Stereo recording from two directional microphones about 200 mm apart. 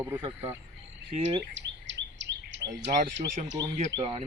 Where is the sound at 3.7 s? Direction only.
35° right (ahead or behind).